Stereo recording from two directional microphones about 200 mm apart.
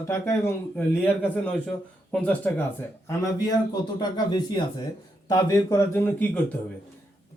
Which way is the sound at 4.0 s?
20° left (ahead or behind).